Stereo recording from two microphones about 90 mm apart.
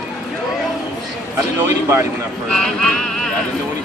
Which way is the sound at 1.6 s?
30° right (ahead or behind).